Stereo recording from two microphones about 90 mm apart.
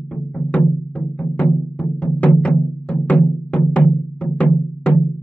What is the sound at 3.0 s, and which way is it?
Music, 15° left (ahead or behind).